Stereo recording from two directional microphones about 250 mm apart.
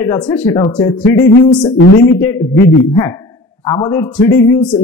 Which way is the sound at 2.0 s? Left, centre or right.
Centre.